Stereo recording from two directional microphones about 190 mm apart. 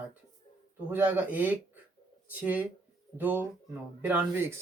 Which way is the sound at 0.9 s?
10° right (ahead or behind).